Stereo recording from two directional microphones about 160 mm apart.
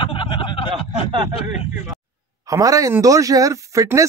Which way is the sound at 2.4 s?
20° right (ahead or behind).